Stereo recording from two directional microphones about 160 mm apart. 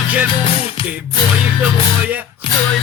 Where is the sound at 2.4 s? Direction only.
35° left (ahead or behind).